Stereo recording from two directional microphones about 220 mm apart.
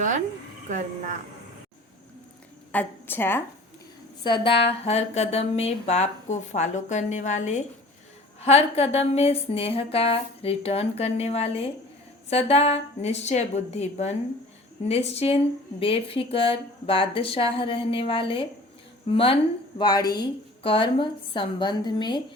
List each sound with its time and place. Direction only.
2.7 s a woman's voice: 10° left (ahead or behind)
4.2 s speech: 20° left (ahead or behind)